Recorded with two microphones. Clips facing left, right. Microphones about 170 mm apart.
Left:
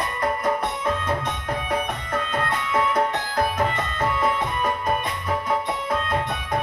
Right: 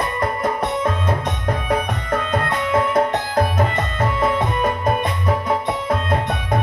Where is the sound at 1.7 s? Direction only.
80° right.